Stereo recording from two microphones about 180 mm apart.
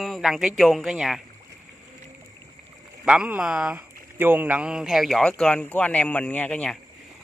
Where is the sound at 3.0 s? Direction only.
5° right (ahead or behind).